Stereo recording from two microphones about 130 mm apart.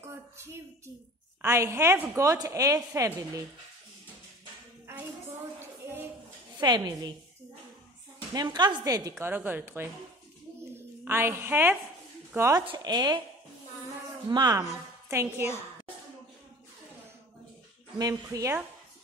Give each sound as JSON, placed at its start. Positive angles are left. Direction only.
{"t": 0.0, "sound": "child singing", "side_deg": -20}
{"t": 1.4, "sound": "a woman's voice", "side_deg": -20}
{"t": 6.6, "sound": "a woman's voice", "side_deg": -30}
{"t": 8.3, "sound": "a woman's voice", "side_deg": -30}
{"t": 9.2, "sound": "a woman's voice", "side_deg": -15}
{"t": 12.6, "sound": "speech", "side_deg": -35}
{"t": 14.3, "sound": "a woman's voice", "side_deg": -30}
{"t": 15.0, "sound": "a woman's voice", "side_deg": -15}
{"t": 17.9, "sound": "a woman's voice", "side_deg": -30}